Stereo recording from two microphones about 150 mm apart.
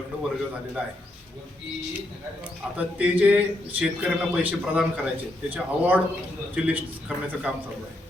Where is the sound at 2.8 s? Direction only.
10° right (ahead or behind).